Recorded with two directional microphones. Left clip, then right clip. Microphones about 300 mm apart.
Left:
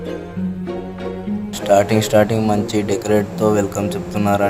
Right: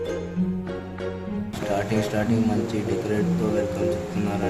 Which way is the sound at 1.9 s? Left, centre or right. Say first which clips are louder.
Left 10 dB; left.